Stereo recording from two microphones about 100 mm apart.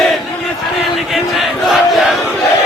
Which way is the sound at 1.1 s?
Centre (ahead or behind).